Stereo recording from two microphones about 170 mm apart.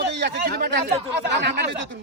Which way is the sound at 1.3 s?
90° right.